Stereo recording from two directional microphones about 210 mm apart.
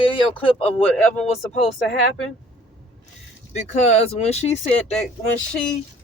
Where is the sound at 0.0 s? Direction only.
25° left (ahead or behind).